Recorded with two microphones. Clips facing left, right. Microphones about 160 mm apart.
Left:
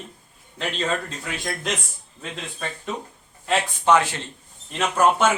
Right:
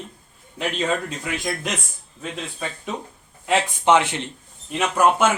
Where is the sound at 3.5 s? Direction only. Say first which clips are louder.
Right 1 dB; 20° right (ahead or behind).